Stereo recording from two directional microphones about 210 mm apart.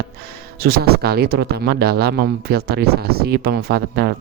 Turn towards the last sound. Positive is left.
turn(degrees=-50)  # may be behind; listen again after turning